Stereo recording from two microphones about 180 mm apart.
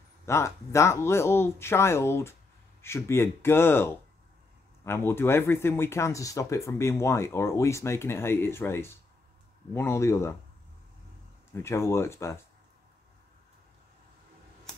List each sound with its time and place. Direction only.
0.3 s speech: 15° left (ahead or behind)
11.6 s speech: 15° left (ahead or behind)